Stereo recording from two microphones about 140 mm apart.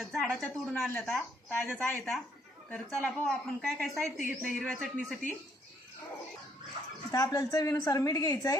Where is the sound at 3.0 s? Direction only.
5° left (ahead or behind).